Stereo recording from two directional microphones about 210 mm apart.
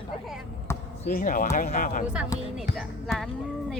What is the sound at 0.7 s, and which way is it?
Basketball bounce, 10° left (ahead or behind).